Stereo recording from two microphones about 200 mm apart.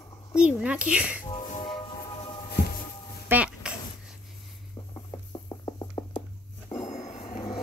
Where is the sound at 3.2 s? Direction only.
5° right (ahead or behind).